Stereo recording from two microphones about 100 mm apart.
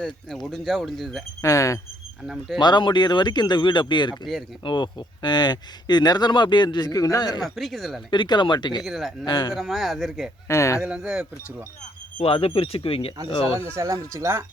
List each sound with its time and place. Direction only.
0.0 s speech: 5° left (ahead or behind)
1.4 s speech: 30° left (ahead or behind)
2.2 s speech: centre (ahead or behind)
2.6 s speech: 45° left (ahead or behind)
7.5 s speech: centre (ahead or behind)
8.1 s speech: 50° left (ahead or behind)
8.8 s speech: centre (ahead or behind)
9.2 s speech: 45° left (ahead or behind)
9.6 s speech: centre (ahead or behind)
10.5 s speech: 30° left (ahead or behind)
10.8 s speech: 5° right (ahead or behind)
12.2 s speech: 70° left (ahead or behind)
13.7 s speech: 30° right (ahead or behind)